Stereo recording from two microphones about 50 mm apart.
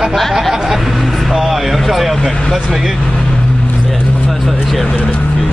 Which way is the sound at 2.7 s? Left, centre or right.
Centre.